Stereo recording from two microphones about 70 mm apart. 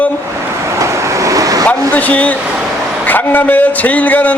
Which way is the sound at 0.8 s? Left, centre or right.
Right.